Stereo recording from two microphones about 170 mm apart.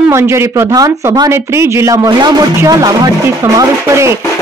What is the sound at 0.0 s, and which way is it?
Speech, 15° right (ahead or behind).